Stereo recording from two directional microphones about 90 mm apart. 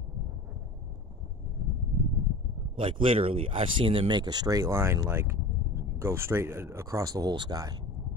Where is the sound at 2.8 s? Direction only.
85° right; by 7.7 s 45° right (ahead or behind).